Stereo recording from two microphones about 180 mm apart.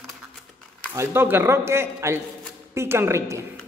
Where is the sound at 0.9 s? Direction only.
10° right (ahead or behind).